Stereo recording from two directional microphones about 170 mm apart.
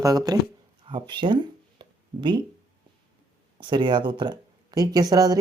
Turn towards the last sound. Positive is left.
turn(degrees=-20)  # may be behind; listen again after turning